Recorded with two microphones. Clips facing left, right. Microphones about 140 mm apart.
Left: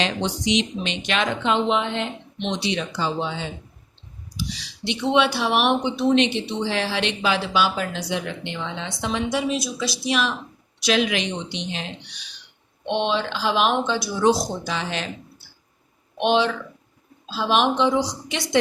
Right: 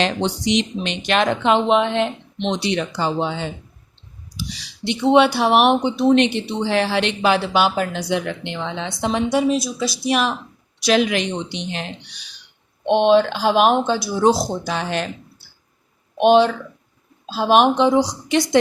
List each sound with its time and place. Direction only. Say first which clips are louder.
0.5 s speech: right 2 dB; 50° right (ahead or behind); by 2.0 s 65° right (ahead or behind)
2.6 s speech: right 2 dB; 55° right (ahead or behind)
4.8 s speech: right 6 dB; 45° right (ahead or behind); by 8.9 s 65° right (ahead or behind)
9.0 s speech: right 5 dB; 45° right (ahead or behind)
12.9 s speech: right 9 dB; 50° right (ahead or behind)
14.7 s speech: right 4 dB; 50° right (ahead or behind)
16.1 s speech: right 6 dB; 45° right (ahead or behind)